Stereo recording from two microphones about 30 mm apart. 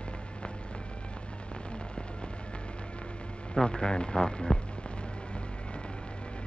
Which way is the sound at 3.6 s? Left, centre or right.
Left.